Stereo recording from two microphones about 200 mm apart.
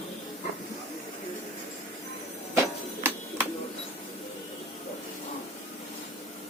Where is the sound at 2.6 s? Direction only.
10° right (ahead or behind).